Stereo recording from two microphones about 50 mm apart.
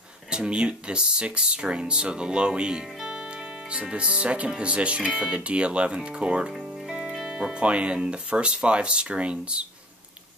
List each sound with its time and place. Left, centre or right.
0.3 s speech: centre